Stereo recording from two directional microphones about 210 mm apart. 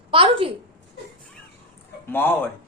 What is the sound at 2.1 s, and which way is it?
Speech, 10° left (ahead or behind).